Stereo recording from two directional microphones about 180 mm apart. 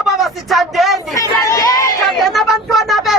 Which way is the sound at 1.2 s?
20° left (ahead or behind).